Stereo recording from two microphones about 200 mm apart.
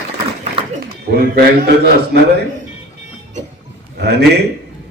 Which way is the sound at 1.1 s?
50° right (ahead or behind).